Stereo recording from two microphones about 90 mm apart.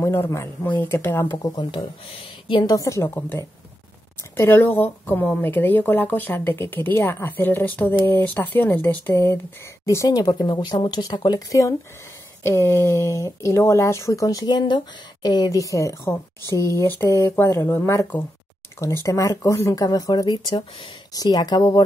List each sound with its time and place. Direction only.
0.0 s speech: 30° left (ahead or behind)
1.4 s speech: 50° left (ahead or behind); by 2.6 s 85° left
2.6 s speech: 40° left (ahead or behind)
4.2 s speech: 25° left (ahead or behind)
10.2 s speech: 55° left (ahead or behind)
11.1 s speech: 45° left (ahead or behind); by 18.0 s 30° left (ahead or behind)
19.0 s speech: 35° left (ahead or behind)
19.8 s speech: 45° left (ahead or behind)